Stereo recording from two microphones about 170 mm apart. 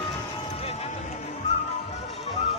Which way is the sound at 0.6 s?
35° left (ahead or behind).